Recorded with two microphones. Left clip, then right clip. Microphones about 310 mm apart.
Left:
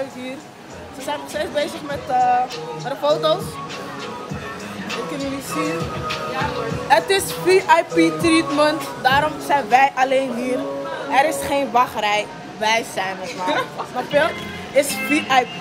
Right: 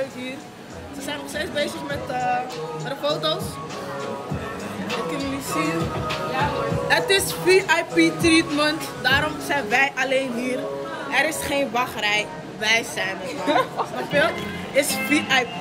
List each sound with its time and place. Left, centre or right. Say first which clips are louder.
1.0 s speech: left 4 dB; centre
5.7 s music: left 1 dB; right
6.9 s speech: left 4 dB; centre
13.5 s music: right 2 dB; right
14.8 s speech: left 2 dB; centre